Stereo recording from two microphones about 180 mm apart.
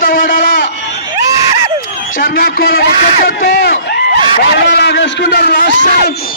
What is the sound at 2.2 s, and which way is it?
A man's voice, 55° left (ahead or behind).